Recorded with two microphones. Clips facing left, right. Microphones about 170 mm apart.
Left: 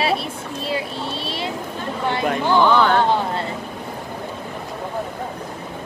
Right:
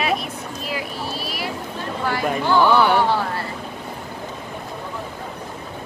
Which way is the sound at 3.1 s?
20° left (ahead or behind).